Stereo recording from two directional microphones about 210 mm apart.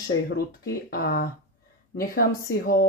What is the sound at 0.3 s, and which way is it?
Speech, 50° left (ahead or behind).